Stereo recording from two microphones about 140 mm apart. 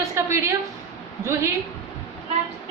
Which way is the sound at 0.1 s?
20° right (ahead or behind).